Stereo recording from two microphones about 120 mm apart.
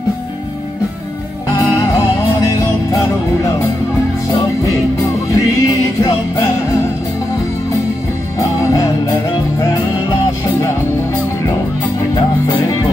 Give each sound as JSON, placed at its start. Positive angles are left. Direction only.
{"t": 2.6, "sound": "music", "side_deg": 25}
{"t": 5.3, "sound": "music", "side_deg": 30}